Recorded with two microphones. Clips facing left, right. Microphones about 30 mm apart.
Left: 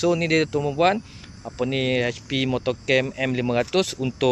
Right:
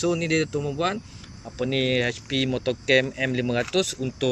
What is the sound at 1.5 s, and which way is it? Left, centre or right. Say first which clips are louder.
Speech: left 1 dB; centre.